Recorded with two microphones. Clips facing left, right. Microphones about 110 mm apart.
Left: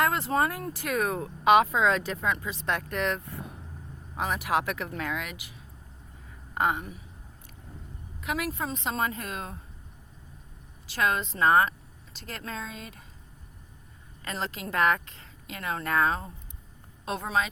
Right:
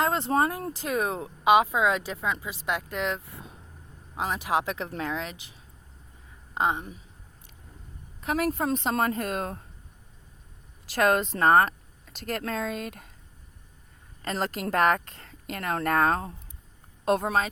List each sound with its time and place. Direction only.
0.0 s a woman's voice: 25° right (ahead or behind)
8.2 s speech: 40° right (ahead or behind)
10.9 s speech: 50° right (ahead or behind)
14.2 s speech: 45° right (ahead or behind)